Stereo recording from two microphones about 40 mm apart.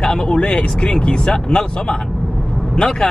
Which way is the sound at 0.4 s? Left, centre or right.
Left.